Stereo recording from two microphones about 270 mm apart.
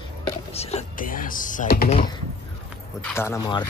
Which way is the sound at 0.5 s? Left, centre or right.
Left.